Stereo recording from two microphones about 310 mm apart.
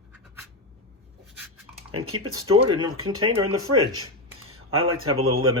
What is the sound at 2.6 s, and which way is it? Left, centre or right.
Speech, centre.